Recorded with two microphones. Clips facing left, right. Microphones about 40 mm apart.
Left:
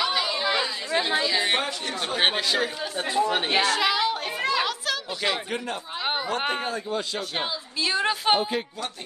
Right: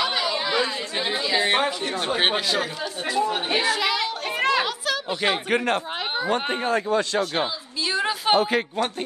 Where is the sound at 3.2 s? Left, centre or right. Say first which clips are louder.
Left 1 dB; left.